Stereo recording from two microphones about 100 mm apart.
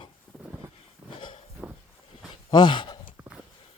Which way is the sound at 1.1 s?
60° left (ahead or behind).